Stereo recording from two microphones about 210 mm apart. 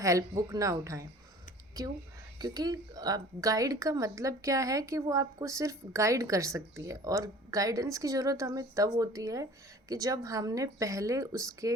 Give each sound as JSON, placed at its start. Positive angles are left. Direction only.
{"t": 0.0, "sound": "a woman's voice", "side_deg": -15}